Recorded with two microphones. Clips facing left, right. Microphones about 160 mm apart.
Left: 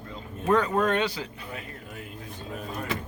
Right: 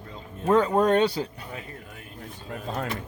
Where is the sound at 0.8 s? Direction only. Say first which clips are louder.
Right 5 dB; 35° right (ahead or behind).